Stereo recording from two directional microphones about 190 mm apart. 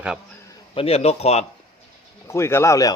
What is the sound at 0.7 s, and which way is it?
Speech, 30° left (ahead or behind).